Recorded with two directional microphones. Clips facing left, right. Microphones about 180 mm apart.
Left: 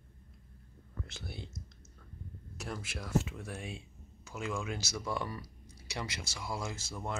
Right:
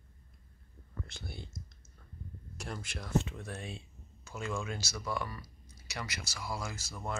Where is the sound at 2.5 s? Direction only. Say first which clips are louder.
Left 1 dB; 5° left (ahead or behind).